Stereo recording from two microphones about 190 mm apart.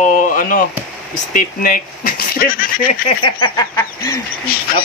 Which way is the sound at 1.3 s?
50° left (ahead or behind).